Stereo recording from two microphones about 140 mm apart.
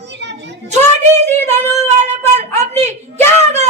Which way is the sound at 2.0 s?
50° right (ahead or behind).